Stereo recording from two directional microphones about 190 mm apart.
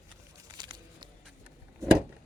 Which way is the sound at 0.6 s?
25° right (ahead or behind).